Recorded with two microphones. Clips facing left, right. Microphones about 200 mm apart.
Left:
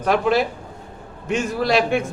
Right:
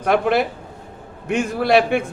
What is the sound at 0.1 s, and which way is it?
A man's voice, 60° right (ahead or behind).